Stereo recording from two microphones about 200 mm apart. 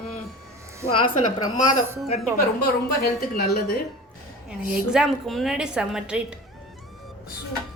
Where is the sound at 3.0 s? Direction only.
50° left (ahead or behind).